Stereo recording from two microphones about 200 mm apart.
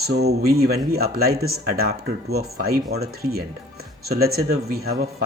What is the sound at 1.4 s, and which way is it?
Speech, 90° right.